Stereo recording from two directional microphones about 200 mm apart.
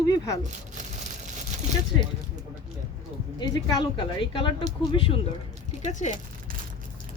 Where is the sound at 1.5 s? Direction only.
35° right (ahead or behind).